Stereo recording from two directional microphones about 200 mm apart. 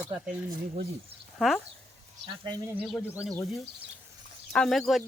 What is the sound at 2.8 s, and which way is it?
Speech, 5° right (ahead or behind).